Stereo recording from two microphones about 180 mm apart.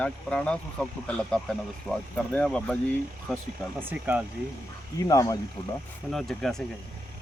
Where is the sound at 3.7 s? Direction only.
10° right (ahead or behind).